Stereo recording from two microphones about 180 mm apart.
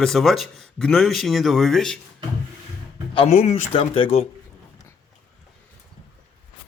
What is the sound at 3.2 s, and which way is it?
Speech, 40° left (ahead or behind).